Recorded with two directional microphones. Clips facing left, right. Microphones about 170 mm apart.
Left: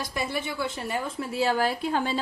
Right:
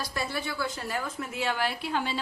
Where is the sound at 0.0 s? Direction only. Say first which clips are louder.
Left 2 dB; 20° left (ahead or behind).